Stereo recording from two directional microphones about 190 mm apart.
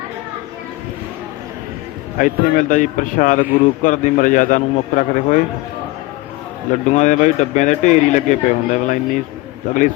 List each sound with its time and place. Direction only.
2.1 s a man's voice: 45° left (ahead or behind)
6.7 s speech: 40° left (ahead or behind)